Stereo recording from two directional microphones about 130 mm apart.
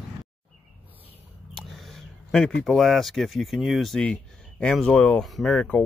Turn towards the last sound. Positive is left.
turn(degrees=5)  # may be behind; listen again after turning